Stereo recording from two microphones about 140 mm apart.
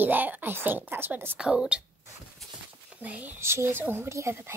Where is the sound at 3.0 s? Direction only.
10° right (ahead or behind).